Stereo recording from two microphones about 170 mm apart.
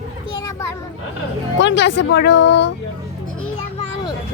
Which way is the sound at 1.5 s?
90° left.